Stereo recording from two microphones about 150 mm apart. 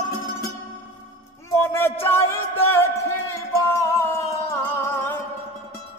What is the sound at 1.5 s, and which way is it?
Music, 15° left (ahead or behind).